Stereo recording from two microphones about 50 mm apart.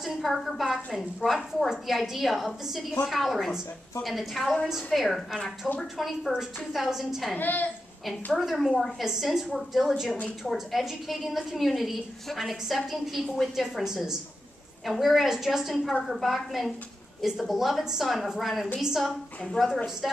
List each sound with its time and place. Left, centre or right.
0.0 s a woman's voice: centre
7.3 s a woman's voice: left
8.4 s a woman's voice: centre